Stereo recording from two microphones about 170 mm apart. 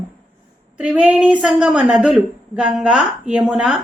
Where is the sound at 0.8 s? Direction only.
5° right (ahead or behind).